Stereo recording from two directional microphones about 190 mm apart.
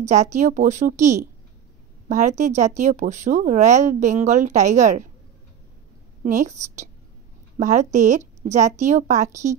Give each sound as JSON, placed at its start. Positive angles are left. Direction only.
{"t": 0.0, "sound": "a woman's voice", "side_deg": -40}
{"t": 6.2, "sound": "a woman's voice", "side_deg": -40}